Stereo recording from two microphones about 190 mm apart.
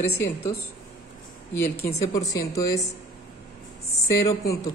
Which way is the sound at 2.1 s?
20° left (ahead or behind).